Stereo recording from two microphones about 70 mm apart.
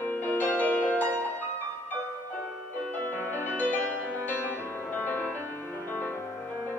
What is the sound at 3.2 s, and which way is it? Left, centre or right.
Music, right.